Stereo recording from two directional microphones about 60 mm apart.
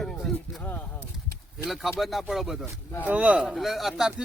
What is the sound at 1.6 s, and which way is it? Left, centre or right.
Speech, centre.